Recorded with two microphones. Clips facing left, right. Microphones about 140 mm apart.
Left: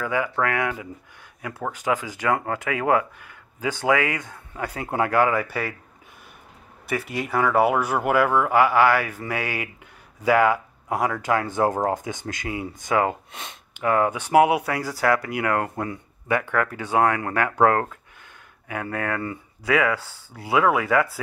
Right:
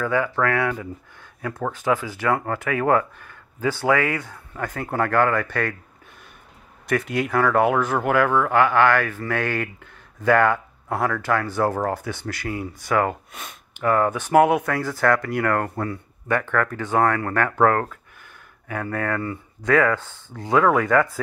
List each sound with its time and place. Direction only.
0.0 s speech: 15° left (ahead or behind)
6.9 s speech: 5° left (ahead or behind); by 19.3 s 20° left (ahead or behind)
19.6 s speech: 10° left (ahead or behind)